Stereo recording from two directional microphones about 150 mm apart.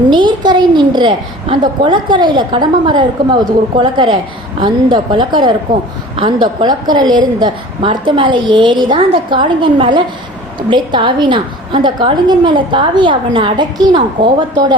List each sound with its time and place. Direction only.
0.1 s a woman's voice: 30° right (ahead or behind)